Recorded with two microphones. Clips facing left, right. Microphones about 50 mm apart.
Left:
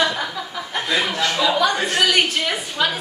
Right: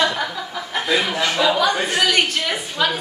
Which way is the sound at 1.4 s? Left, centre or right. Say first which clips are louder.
Even; centre.